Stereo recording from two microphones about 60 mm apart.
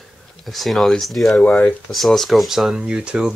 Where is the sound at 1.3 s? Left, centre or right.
Left.